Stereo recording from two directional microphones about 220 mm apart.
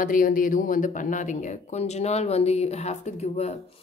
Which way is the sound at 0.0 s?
40° left (ahead or behind).